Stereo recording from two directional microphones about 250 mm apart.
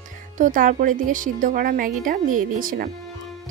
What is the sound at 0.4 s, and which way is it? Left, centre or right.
Speech, right.